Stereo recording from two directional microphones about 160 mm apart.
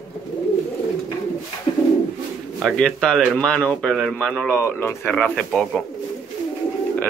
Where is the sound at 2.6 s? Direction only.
5° left (ahead or behind).